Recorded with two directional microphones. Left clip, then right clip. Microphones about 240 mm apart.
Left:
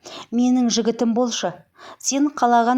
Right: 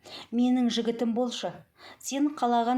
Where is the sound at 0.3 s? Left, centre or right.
Left.